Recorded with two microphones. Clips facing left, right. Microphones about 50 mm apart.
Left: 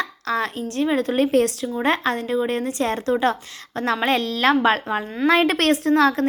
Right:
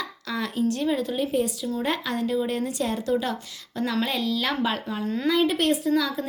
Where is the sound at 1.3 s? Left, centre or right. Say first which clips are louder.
Left 7 dB; left.